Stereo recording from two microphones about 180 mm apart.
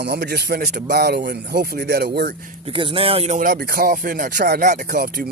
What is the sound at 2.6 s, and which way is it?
Speech, 30° right (ahead or behind).